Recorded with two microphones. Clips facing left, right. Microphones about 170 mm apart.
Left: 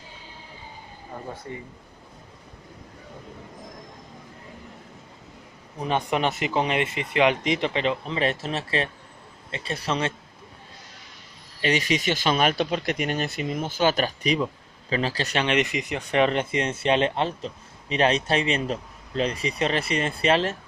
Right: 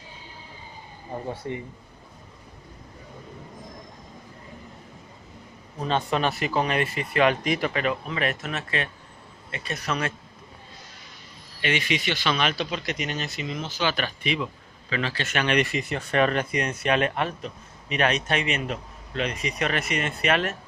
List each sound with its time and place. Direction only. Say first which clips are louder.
1.5 s speech: right 6 dB; 20° right (ahead or behind)
5.8 s speech: even; 15° left (ahead or behind)
11.6 s speech: left 3 dB; 40° left (ahead or behind)
15.4 s speech: right 2 dB; 20° left (ahead or behind)